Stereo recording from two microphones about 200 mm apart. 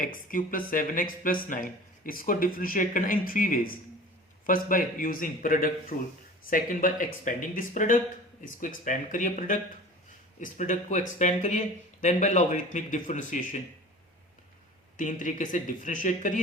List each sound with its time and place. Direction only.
0.0 s a man's voice: 40° left (ahead or behind)
14.9 s a man's voice: 40° left (ahead or behind)